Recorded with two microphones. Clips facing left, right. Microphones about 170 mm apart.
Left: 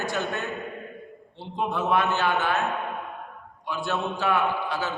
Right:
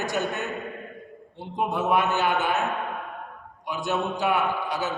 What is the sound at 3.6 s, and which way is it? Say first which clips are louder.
Speech: right 1 dB; 15° right (ahead or behind).